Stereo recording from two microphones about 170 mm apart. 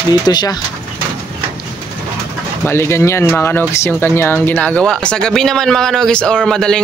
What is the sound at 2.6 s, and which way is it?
Speech, 15° left (ahead or behind).